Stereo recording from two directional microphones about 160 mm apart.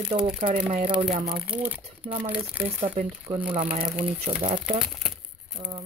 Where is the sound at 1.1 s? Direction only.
60° right (ahead or behind).